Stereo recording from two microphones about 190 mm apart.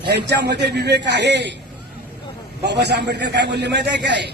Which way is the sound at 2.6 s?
60° right (ahead or behind).